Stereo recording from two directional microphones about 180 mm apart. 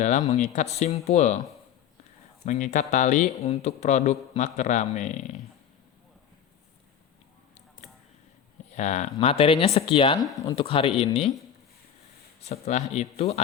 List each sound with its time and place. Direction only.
0.0 s speech: 40° left (ahead or behind)
2.4 s speech: 40° left (ahead or behind)
8.7 s speech: 40° left (ahead or behind)
10.3 s speech: 15° left (ahead or behind)
10.6 s speech: 30° left (ahead or behind)
12.4 s speech: 40° left (ahead or behind)